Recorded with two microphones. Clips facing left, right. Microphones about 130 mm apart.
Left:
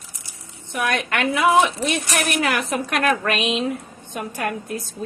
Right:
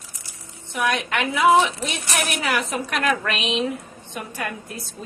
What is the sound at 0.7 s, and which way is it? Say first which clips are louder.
A woman's voice: even; 55° left (ahead or behind).